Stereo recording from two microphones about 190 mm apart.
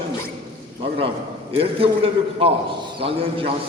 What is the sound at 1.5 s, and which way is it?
A man's voice, 30° right (ahead or behind).